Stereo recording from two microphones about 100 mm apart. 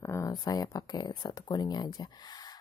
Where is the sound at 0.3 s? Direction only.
40° left (ahead or behind).